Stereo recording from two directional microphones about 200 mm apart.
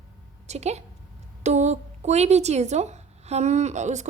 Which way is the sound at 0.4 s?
35° right (ahead or behind).